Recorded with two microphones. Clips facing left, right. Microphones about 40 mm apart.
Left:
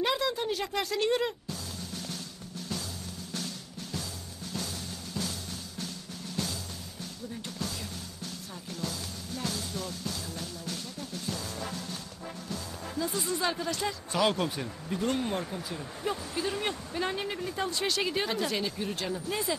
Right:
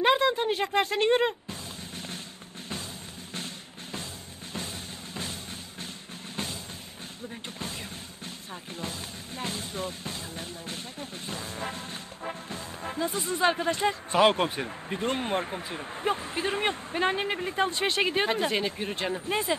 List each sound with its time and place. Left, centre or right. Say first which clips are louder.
0.0 s a sound: right 6 dB; right
3.3 s drum: even; right
8.7 s speech: left 1 dB; right